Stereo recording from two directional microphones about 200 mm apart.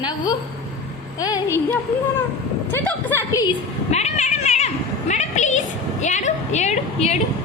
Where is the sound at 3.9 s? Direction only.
35° left (ahead or behind).